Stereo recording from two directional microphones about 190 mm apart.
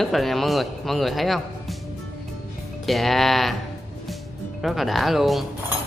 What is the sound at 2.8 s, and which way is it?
Speech, centre (ahead or behind).